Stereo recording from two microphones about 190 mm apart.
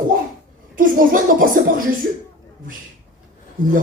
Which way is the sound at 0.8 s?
45° right (ahead or behind).